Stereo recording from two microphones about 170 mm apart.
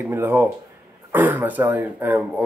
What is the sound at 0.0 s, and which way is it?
Speech, 10° right (ahead or behind).